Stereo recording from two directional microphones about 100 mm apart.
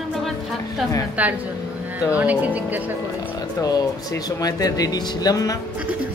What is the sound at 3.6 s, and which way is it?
Speech, 40° left (ahead or behind).